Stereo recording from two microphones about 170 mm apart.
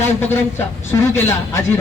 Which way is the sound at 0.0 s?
15° left (ahead or behind).